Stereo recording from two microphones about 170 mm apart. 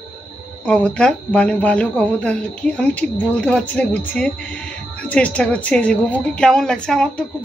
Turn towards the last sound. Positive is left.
turn(degrees=5)  # may be behind; listen again after turning